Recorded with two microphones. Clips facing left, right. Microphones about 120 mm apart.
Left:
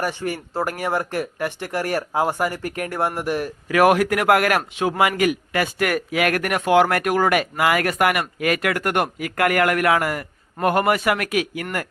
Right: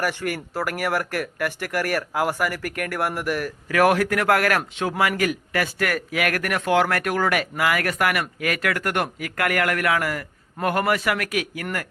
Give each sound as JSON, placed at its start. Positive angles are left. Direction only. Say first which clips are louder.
{"t": 0.0, "sound": "a man's voice", "louder": "left 1 dB", "side_deg": 20}
{"t": 3.8, "sound": "a man's voice", "louder": "left 2 dB", "side_deg": 15}